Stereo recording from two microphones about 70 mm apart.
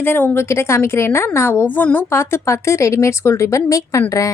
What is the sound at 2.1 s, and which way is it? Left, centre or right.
A woman's voice, left.